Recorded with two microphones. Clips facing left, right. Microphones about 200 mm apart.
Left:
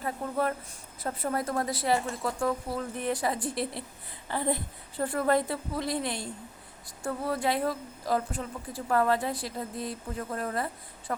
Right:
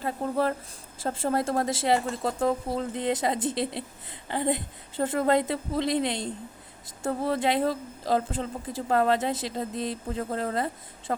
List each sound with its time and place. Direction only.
0.0 s a woman's voice: 30° right (ahead or behind)